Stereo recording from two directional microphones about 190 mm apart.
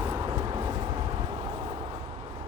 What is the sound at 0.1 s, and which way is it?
Vehicle, 20° right (ahead or behind).